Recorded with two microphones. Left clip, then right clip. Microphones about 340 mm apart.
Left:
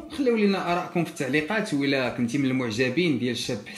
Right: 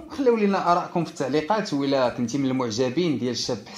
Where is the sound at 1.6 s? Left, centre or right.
Centre.